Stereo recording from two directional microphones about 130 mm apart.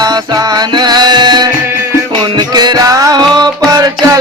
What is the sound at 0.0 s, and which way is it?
Music, 30° right (ahead or behind).